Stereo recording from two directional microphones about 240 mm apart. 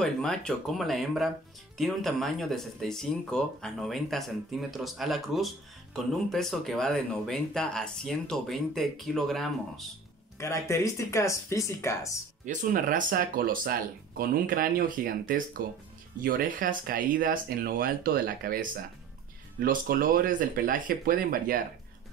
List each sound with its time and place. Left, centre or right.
0.0 s speech: centre
10.3 s speech: centre
12.4 s speech: right